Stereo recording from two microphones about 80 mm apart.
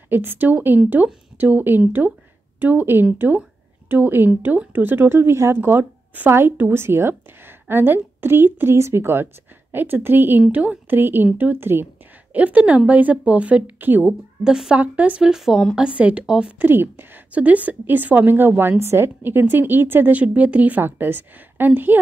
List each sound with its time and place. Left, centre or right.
0.1 s speech: right
10.5 s speech: centre
10.9 s speech: right
14.4 s speech: centre
16.6 s speech: right